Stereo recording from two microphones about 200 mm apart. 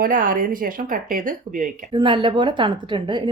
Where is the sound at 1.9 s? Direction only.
25° right (ahead or behind).